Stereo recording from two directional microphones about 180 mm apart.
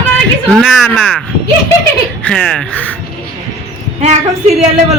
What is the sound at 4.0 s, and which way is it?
Speech, 35° right (ahead or behind).